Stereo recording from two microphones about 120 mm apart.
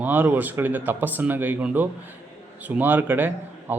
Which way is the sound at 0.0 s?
15° right (ahead or behind).